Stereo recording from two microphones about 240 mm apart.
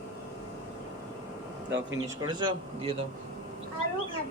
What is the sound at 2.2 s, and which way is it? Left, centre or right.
Speech, centre.